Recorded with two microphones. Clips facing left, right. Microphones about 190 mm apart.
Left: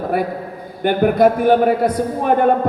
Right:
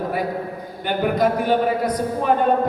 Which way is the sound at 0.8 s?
50° left (ahead or behind).